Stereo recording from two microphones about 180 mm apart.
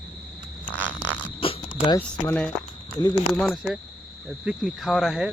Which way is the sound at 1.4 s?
30° left (ahead or behind).